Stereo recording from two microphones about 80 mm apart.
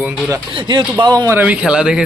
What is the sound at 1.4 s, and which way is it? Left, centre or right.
Speech, centre.